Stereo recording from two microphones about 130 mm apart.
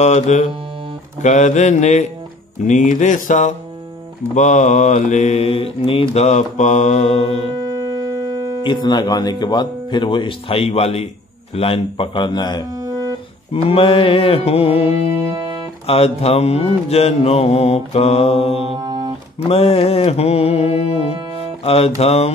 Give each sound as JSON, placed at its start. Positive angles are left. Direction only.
{"t": 0.0, "sound": "mantra", "side_deg": 60}
{"t": 2.6, "sound": "speech", "side_deg": 70}
{"t": 4.4, "sound": "mantra", "side_deg": 65}
{"t": 8.6, "sound": "speech", "side_deg": 35}
{"t": 13.5, "sound": "mantra", "side_deg": 45}
{"t": 15.3, "sound": "music", "side_deg": -30}
{"t": 15.9, "sound": "mantra", "side_deg": 50}
{"t": 18.8, "sound": "music", "side_deg": -30}
{"t": 19.5, "sound": "mantra", "side_deg": 55}